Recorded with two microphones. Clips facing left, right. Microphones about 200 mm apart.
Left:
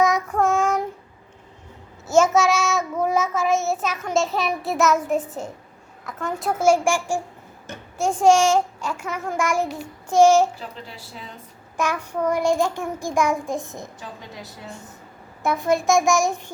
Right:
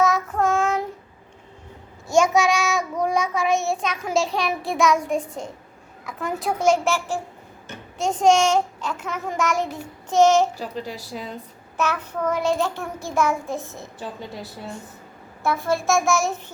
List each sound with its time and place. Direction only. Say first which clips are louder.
0.0 s child singing: left 1 dB; 15° left (ahead or behind)
2.0 s child singing: left 1 dB; centre (ahead or behind)
6.6 s a child's voice: left 2 dB; 10° left (ahead or behind)
10.6 s a woman's voice: right 6 dB; 40° right (ahead or behind)
11.8 s a child's voice: left 1 dB; 10° left (ahead or behind)
15.4 s a child's voice: left 2 dB; 15° left (ahead or behind)